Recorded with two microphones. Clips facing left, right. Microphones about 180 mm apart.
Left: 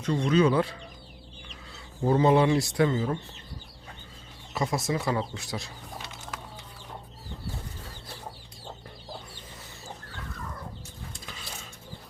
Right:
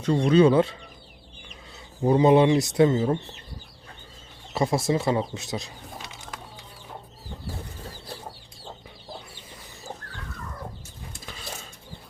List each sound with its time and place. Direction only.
0.0 s speech: 30° right (ahead or behind)
2.0 s speech: 15° right (ahead or behind)
4.5 s speech: 30° right (ahead or behind)